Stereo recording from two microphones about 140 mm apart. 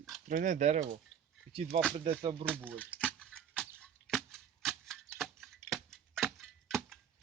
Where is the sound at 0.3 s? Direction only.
65° right (ahead or behind).